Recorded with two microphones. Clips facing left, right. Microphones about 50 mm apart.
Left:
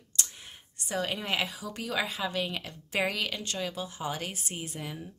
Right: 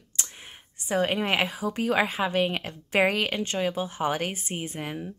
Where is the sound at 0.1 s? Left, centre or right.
Right.